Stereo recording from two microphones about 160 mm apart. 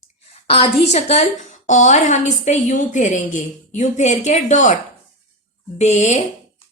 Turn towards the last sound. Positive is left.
turn(degrees=45)  # may be behind; listen again after turning